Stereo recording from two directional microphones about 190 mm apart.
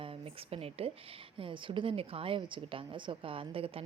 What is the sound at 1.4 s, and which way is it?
A woman's voice, 25° right (ahead or behind).